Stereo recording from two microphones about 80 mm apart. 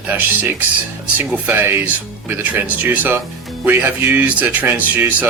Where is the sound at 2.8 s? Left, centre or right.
Right.